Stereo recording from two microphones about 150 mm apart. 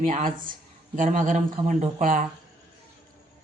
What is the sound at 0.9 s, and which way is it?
Speech, 60° right (ahead or behind).